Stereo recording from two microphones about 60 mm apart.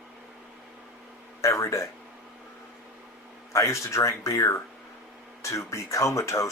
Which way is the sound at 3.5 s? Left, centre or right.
Left.